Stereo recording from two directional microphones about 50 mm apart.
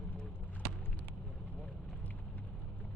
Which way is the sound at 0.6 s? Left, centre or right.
Centre.